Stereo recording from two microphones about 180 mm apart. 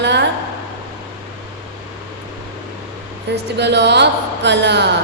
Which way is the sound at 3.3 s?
70° right (ahead or behind).